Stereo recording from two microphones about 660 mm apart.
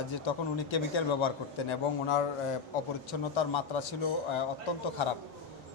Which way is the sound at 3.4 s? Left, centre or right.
Left.